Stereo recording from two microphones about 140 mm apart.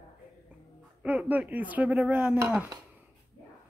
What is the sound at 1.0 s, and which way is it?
Speech, 10° right (ahead or behind).